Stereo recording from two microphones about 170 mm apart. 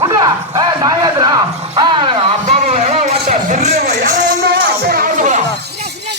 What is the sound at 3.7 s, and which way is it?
Music, 70° right (ahead or behind).